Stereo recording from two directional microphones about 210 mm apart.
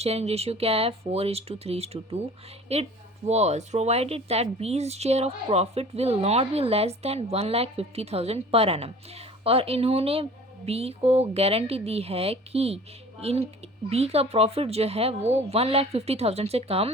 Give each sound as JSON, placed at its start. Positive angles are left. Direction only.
{"t": 0.0, "sound": "speech", "side_deg": -30}